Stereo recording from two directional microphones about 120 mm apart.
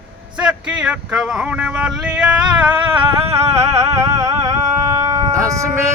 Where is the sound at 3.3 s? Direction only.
25° right (ahead or behind).